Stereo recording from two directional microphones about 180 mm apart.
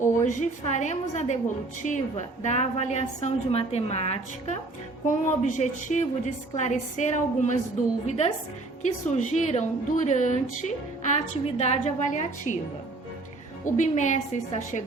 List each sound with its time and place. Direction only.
0.3 s a woman's voice: 40° left (ahead or behind)
13.7 s a woman's voice: 45° left (ahead or behind)